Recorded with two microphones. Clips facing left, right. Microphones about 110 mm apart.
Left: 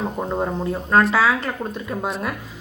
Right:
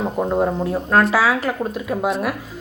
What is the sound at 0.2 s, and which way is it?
Speech, 5° right (ahead or behind).